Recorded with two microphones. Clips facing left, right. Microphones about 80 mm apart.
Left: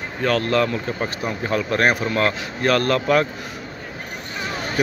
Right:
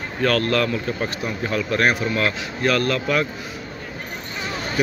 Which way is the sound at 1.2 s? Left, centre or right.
Left.